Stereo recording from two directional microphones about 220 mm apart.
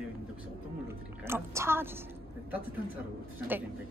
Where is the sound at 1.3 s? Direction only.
10° right (ahead or behind).